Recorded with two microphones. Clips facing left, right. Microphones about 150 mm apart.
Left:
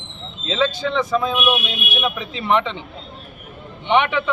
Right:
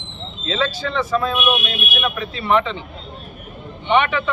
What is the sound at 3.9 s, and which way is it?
Speech, 15° left (ahead or behind).